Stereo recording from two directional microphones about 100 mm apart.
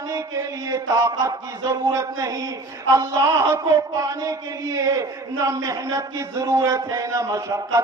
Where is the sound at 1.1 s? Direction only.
40° right (ahead or behind).